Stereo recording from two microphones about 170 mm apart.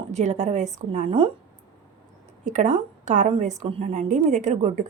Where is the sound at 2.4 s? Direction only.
45° right (ahead or behind).